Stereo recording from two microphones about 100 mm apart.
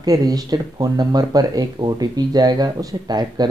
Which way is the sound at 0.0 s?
40° right (ahead or behind).